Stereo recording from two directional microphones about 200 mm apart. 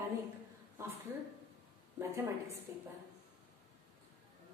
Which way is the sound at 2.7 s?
15° right (ahead or behind).